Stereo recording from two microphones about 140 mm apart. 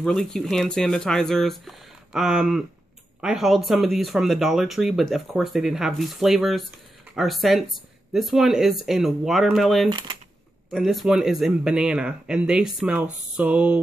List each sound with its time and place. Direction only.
0.0 s speech: 5° left (ahead or behind)
9.8 s speech: 35° right (ahead or behind)
10.7 s speech: centre (ahead or behind)